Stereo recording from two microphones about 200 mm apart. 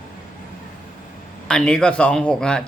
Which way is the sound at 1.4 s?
5° left (ahead or behind).